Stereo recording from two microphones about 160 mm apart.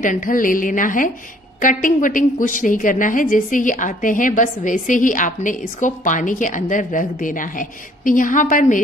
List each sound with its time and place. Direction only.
0.0 s a woman's voice: 55° left (ahead or behind)